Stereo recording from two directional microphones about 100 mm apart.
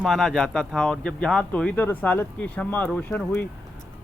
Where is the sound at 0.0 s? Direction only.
5° left (ahead or behind).